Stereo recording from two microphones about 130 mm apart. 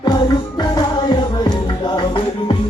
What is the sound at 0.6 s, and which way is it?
Music, 30° left (ahead or behind).